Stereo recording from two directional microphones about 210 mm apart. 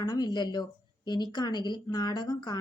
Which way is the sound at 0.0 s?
20° left (ahead or behind).